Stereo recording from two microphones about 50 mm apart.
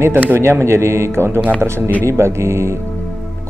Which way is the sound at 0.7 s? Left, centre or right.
Right.